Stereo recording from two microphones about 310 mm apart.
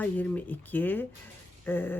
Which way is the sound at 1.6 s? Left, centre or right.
Centre.